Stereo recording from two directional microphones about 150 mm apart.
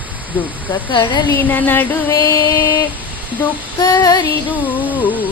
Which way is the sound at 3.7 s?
25° left (ahead or behind).